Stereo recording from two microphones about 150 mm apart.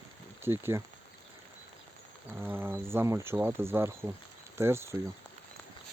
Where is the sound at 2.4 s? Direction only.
15° right (ahead or behind).